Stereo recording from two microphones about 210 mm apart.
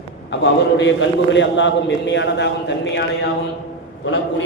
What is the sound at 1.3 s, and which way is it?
A man's voice, 60° left (ahead or behind).